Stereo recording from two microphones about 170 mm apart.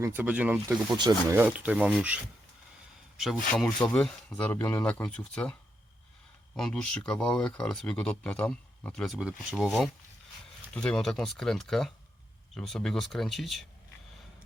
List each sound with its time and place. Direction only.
0.0 s speech: 10° right (ahead or behind)
0.9 s speech: 25° right (ahead or behind)
1.4 s speech: 10° right (ahead or behind)
6.6 s speech: 5° left (ahead or behind)